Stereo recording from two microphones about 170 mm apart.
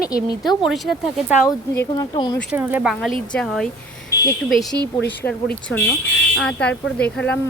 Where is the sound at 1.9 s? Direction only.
25° left (ahead or behind).